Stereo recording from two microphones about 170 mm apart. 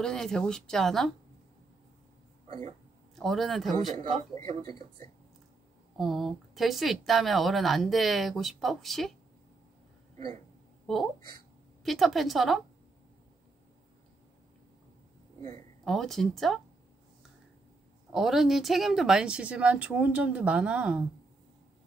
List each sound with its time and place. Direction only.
0.0 s speech: 5° left (ahead or behind)
2.4 s a sound: 40° right (ahead or behind)
3.2 s speech: centre (ahead or behind)
4.6 s speech: 25° left (ahead or behind)
5.9 s speech: centre (ahead or behind)
11.8 s speech: centre (ahead or behind)
15.8 s speech: centre (ahead or behind)
18.1 s speech: centre (ahead or behind)